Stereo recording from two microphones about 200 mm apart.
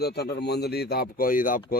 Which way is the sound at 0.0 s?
55° left (ahead or behind).